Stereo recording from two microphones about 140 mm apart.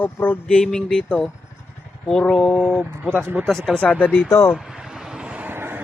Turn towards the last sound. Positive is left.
turn(degrees=-15)  # may be behind; listen again after turning